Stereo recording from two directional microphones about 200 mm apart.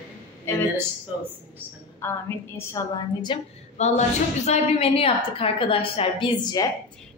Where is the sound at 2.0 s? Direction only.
10° left (ahead or behind).